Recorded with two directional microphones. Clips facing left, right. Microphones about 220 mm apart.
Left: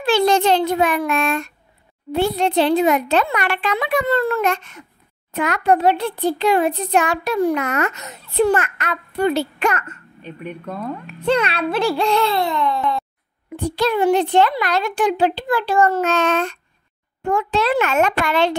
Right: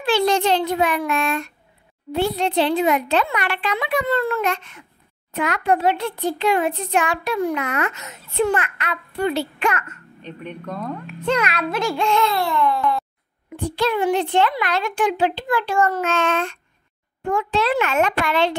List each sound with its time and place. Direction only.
0.0 s a child's voice: 45° left (ahead or behind)
10.2 s speech: 10° left (ahead or behind)
11.2 s a child's voice: 30° left (ahead or behind)
12.4 s a sound: 20° left (ahead or behind)
13.6 s a child's voice: 40° left (ahead or behind)